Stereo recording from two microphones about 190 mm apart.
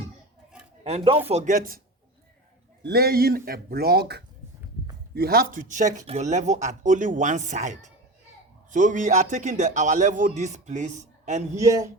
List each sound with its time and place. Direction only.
0.9 s speech: 30° right (ahead or behind)
2.8 s speech: 55° right (ahead or behind); by 11.4 s 40° right (ahead or behind)
11.5 s a man's voice: 15° right (ahead or behind)